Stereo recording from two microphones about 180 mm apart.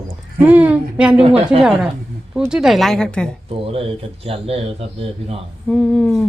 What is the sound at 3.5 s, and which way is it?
Speech, 30° right (ahead or behind).